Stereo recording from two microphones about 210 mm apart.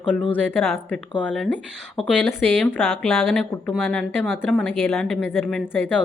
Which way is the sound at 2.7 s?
Centre (ahead or behind).